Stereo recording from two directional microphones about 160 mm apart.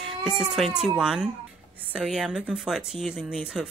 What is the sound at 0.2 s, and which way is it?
Speech, 5° right (ahead or behind).